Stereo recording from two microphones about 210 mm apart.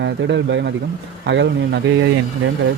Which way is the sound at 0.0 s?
55° right (ahead or behind).